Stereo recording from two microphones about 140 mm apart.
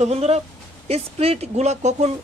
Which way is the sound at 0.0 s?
50° right (ahead or behind).